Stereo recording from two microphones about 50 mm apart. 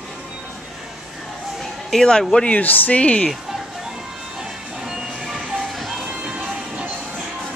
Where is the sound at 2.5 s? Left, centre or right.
Left.